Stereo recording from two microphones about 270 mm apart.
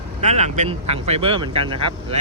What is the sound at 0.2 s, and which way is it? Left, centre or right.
Speech, right.